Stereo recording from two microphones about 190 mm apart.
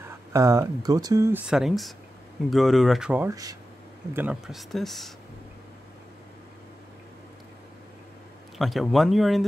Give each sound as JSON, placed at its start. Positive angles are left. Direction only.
{"t": 0.3, "sound": "speech", "side_deg": -15}
{"t": 1.5, "sound": "speech", "side_deg": 0}
{"t": 8.5, "sound": "speech", "side_deg": 0}